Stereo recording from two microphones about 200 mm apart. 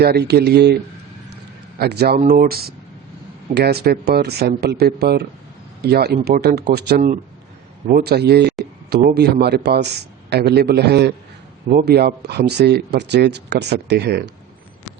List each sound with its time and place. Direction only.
0.0 s speech: 55° right (ahead or behind)
1.8 s speech: 50° right (ahead or behind)